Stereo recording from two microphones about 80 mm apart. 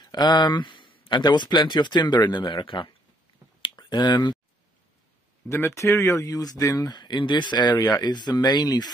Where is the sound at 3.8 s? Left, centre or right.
Left.